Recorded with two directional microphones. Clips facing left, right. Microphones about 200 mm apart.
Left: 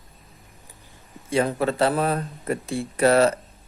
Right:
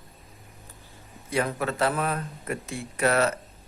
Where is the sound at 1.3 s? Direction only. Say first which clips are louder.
Left 5 dB; 30° left (ahead or behind).